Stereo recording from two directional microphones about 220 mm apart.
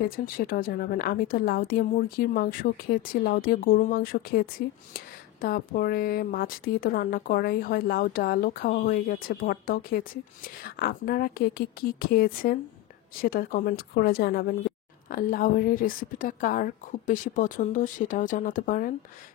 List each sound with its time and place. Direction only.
0.0 s a woman's voice: 40° left (ahead or behind)